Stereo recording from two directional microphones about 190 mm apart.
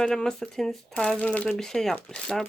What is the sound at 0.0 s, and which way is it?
Speech, 5° left (ahead or behind).